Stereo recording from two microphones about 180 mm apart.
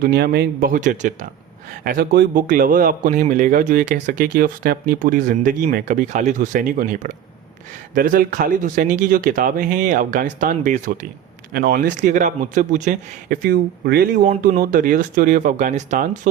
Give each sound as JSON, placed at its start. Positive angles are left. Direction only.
{"t": 0.0, "sound": "a man's voice", "side_deg": -60}
{"t": 1.8, "sound": "a man's voice", "side_deg": -55}
{"t": 11.5, "sound": "a man's voice", "side_deg": -60}
{"t": 14.4, "sound": "a man's voice", "side_deg": -50}